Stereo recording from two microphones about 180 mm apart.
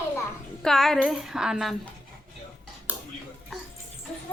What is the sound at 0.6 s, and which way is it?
Speech, centre (ahead or behind).